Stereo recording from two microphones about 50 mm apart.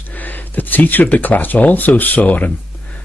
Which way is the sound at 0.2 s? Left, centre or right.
Left.